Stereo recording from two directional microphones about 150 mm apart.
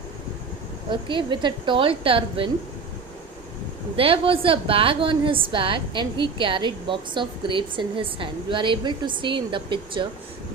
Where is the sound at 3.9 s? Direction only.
35° right (ahead or behind).